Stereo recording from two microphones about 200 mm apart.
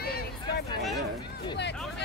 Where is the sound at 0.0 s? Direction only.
50° left (ahead or behind).